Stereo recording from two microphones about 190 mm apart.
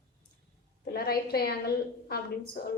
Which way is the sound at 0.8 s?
55° left (ahead or behind).